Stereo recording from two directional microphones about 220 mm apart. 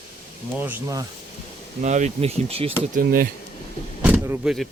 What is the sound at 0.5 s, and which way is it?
Speech, 10° right (ahead or behind).